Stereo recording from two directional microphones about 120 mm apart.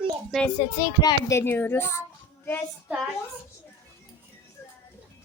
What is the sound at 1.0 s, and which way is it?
Speech, 25° left (ahead or behind).